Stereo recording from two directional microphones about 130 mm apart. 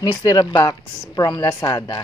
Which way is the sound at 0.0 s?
25° left (ahead or behind).